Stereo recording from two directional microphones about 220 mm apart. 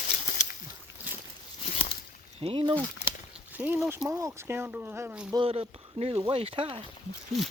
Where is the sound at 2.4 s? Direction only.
25° right (ahead or behind).